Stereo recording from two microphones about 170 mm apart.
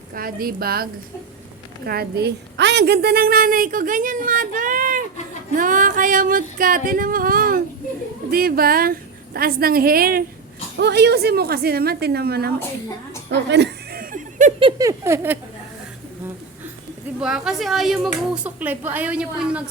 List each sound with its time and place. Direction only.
0.1 s a woman's voice: 60° right (ahead or behind)
10.8 s a woman's voice: 75° right (ahead or behind)
13.5 s chuckle: 80° right; by 14.5 s 50° right (ahead or behind)
14.8 s a sound: 15° right (ahead or behind)
17.2 s speech: 5° right (ahead or behind)